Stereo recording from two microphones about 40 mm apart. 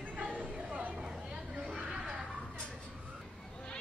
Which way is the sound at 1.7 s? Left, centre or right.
Centre.